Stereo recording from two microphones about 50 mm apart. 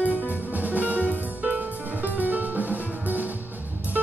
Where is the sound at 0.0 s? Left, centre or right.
Left.